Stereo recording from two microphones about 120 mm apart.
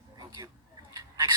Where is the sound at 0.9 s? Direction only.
35° right (ahead or behind).